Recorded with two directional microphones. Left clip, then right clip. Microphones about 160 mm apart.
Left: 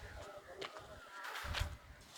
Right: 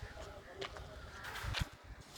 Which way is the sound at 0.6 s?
50° right (ahead or behind).